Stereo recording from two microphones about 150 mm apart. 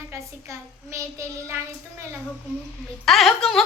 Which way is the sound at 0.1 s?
20° right (ahead or behind).